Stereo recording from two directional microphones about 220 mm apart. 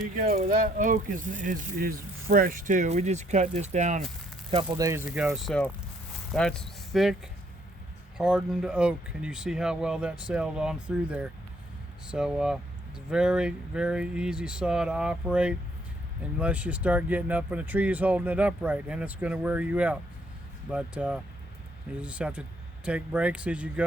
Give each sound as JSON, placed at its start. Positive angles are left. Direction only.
{"t": 0.2, "sound": "speech", "side_deg": -40}
{"t": 4.5, "sound": "speech", "side_deg": -15}
{"t": 8.2, "sound": "speech", "side_deg": -5}